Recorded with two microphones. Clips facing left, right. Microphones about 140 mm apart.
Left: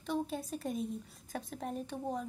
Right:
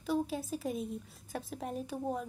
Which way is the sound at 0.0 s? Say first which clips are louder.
Right 3 dB; 5° right (ahead or behind).